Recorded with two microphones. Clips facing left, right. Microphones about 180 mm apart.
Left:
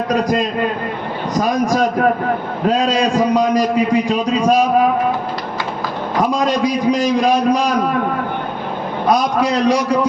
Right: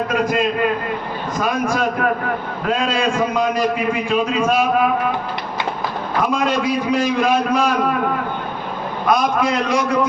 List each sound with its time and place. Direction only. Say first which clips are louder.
0.1 s a man's voice: left 4 dB; 40° left (ahead or behind)
6.3 s a man's voice: left 2 dB; 35° left (ahead or behind)
9.0 s a man's voice: left 2 dB; 35° left (ahead or behind)